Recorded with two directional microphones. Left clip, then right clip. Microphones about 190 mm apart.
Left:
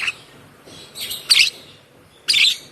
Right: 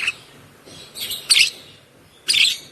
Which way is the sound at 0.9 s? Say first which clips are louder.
Left 1 dB; 20° right (ahead or behind).